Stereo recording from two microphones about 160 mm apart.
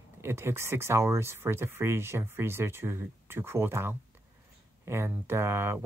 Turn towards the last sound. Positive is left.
turn(degrees=-15)  # may be behind; listen again after turning